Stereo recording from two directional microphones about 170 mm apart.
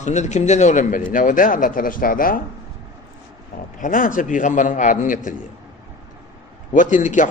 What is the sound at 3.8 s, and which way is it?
A man's voice, 55° left (ahead or behind).